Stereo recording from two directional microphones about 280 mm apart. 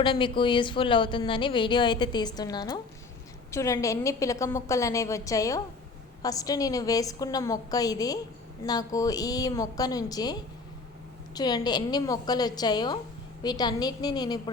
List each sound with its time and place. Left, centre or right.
0.0 s a woman's voice: centre
11.3 s a woman's voice: centre